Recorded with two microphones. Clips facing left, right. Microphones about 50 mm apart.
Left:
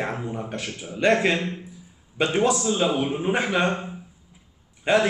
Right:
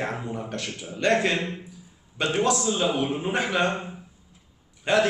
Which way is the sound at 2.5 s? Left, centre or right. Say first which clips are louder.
Left 2 dB; centre.